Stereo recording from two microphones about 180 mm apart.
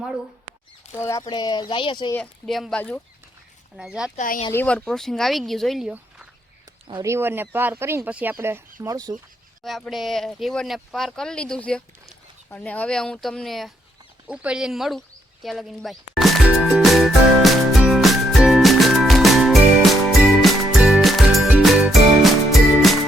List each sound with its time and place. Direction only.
0.9 s speech: 15° left (ahead or behind)
2.1 s speech: 5° left (ahead or behind)
4.2 s speech: 45° left (ahead or behind)
4.5 s speech: 5° left (ahead or behind)
6.8 s speech: 20° right (ahead or behind)
9.6 s speech: centre (ahead or behind)
15.4 s music: centre (ahead or behind)